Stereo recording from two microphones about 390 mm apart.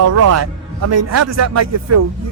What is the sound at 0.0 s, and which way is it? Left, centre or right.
A man's voice, right.